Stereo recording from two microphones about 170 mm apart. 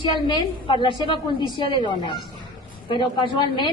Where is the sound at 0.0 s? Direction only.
25° left (ahead or behind).